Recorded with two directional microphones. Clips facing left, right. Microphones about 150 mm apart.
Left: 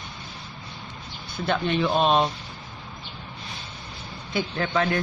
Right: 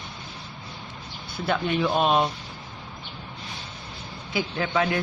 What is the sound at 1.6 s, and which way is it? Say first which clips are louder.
Speech: left 1 dB; 10° right (ahead or behind).